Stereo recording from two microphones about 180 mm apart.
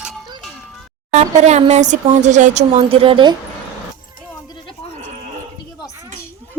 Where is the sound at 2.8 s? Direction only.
30° right (ahead or behind).